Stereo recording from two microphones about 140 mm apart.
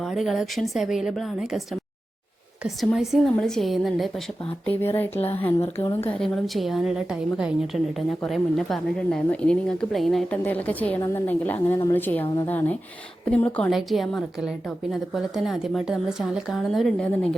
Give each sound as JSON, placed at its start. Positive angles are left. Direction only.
{"t": 0.0, "sound": "a woman's voice", "side_deg": 0}
{"t": 4.6, "sound": "a woman's voice", "side_deg": 15}
{"t": 6.1, "sound": "a woman's voice", "side_deg": 5}